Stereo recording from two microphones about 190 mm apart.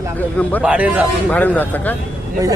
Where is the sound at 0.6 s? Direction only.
5° right (ahead or behind).